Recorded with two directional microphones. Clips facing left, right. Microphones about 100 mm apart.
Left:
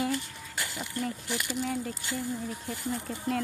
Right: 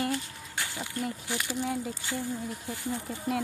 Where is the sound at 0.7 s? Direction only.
5° right (ahead or behind).